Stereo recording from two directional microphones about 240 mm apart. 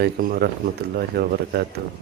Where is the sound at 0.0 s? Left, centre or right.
Right.